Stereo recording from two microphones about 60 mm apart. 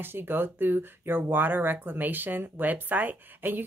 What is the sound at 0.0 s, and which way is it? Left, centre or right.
Speech, right.